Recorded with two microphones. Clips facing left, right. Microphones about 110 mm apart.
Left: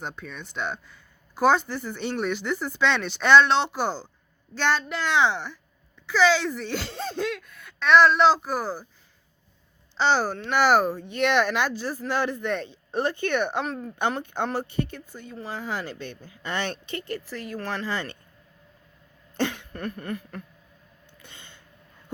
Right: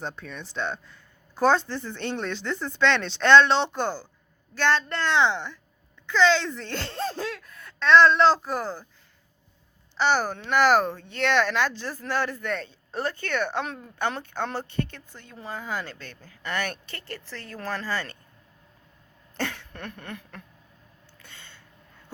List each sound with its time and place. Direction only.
0.0 s speech: centre (ahead or behind)
10.0 s speech: 15° left (ahead or behind)
19.4 s cough: 20° left (ahead or behind)
19.7 s speech: 5° left (ahead or behind)
21.2 s a sound: 15° left (ahead or behind)